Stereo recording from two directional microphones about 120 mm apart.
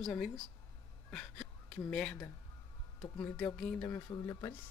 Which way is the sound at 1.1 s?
5° left (ahead or behind).